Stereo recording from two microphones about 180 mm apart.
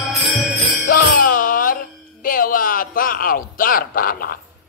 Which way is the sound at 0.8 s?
50° left (ahead or behind).